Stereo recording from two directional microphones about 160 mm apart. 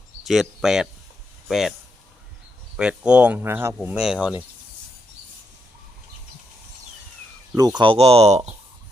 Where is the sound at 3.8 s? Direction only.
5° right (ahead or behind).